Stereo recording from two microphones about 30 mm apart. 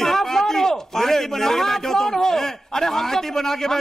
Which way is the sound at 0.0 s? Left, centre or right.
Centre.